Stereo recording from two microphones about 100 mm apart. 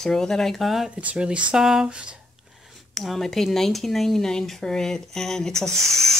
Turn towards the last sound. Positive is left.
turn(degrees=5)  # may be behind; listen again after turning